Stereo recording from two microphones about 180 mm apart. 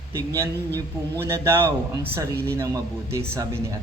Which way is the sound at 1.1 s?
15° right (ahead or behind).